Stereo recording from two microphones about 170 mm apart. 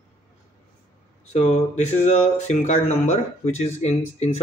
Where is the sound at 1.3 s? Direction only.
45° left (ahead or behind).